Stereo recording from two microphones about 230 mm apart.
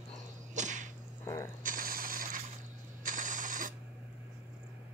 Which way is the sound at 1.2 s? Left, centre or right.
Centre.